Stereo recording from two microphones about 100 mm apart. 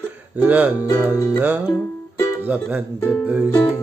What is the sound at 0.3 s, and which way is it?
Music, 15° right (ahead or behind).